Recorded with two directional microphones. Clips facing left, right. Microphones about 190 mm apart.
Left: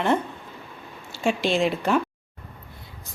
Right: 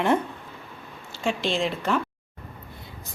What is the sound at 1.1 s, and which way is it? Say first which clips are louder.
Speech: left 3 dB; 10° left (ahead or behind).